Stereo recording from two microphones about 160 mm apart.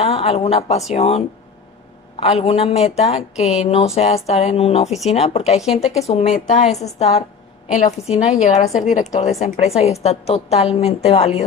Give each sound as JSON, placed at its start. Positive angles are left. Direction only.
{"t": 0.0, "sound": "a woman's voice", "side_deg": 40}
{"t": 5.6, "sound": "speech", "side_deg": 0}
{"t": 6.0, "sound": "a woman's voice", "side_deg": 40}